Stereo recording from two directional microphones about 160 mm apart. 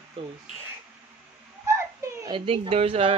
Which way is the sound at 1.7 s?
20° right (ahead or behind).